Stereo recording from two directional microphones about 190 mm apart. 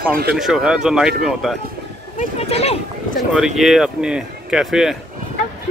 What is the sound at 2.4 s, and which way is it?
Speech, 30° left (ahead or behind).